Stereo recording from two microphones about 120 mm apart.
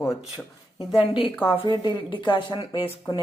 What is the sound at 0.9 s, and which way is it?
Speech, 45° left (ahead or behind).